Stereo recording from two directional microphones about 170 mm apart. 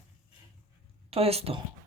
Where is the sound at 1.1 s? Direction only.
35° right (ahead or behind).